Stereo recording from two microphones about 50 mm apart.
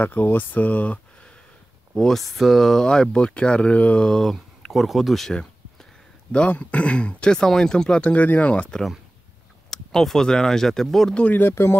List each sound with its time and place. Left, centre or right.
0.0 s speech: left
2.0 s speech: centre; by 4.0 s left
4.0 s speech: centre
6.5 s speech: left
9.7 s speech: centre
11.1 s speech: left
11.5 s speech: left